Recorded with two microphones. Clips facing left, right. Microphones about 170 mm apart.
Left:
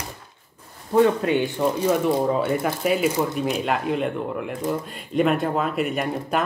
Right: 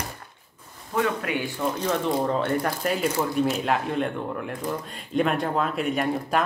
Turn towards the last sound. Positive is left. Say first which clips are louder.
# even
turn(degrees=0)  # may be behind; listen again after turning